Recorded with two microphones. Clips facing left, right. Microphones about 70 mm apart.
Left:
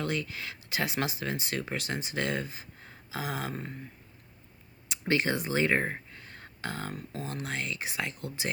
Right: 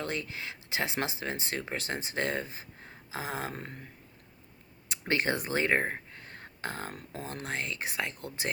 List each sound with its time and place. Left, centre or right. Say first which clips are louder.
0.0 s speech: left 2 dB; right
4.9 s a sound: left 1 dB; right
7.1 s speech: right 1 dB; right